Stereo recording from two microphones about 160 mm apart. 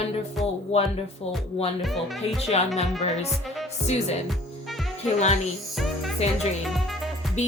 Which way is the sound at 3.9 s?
40° left (ahead or behind).